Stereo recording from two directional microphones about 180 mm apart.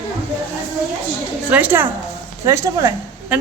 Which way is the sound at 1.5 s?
10° right (ahead or behind).